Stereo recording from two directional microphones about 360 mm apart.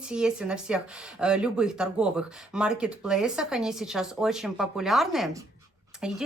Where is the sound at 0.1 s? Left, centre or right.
Centre.